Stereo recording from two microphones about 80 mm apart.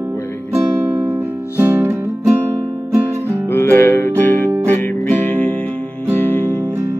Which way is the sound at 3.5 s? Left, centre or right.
Left.